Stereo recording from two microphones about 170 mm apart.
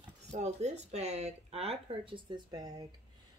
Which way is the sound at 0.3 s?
40° right (ahead or behind).